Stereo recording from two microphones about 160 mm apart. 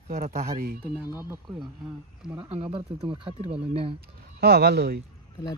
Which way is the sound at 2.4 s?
35° right (ahead or behind).